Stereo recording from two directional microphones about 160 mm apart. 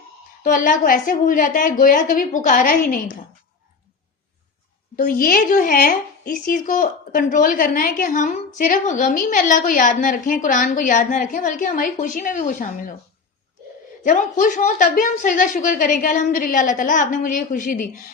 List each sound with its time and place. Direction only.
0.4 s a woman's voice: 55° left (ahead or behind)
4.9 s a woman's voice: 60° left (ahead or behind)
14.0 s a woman's voice: 50° left (ahead or behind)